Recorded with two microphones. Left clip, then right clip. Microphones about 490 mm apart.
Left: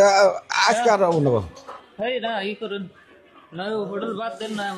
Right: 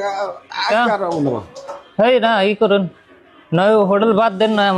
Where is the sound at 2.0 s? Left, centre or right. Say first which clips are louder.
Right 12 dB; right.